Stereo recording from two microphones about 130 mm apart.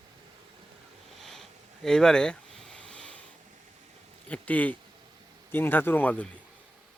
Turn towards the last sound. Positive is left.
turn(degrees=15)  # may be behind; listen again after turning